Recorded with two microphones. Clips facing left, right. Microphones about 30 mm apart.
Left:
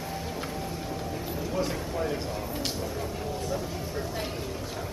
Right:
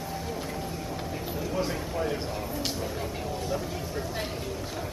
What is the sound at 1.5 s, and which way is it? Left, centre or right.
Speech, centre.